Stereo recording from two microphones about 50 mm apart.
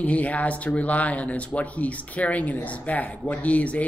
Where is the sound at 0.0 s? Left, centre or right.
Left.